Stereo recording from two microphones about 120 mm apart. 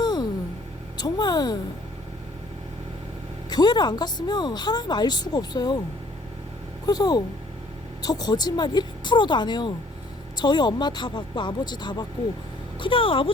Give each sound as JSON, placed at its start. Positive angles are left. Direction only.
{"t": 0.0, "sound": "a sound", "side_deg": 35}
{"t": 3.5, "sound": "speech", "side_deg": 35}
{"t": 6.8, "sound": "speech", "side_deg": 35}